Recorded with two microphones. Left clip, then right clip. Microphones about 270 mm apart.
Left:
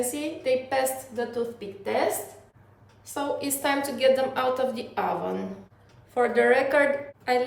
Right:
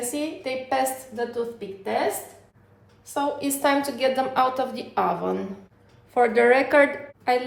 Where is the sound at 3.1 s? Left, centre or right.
Centre.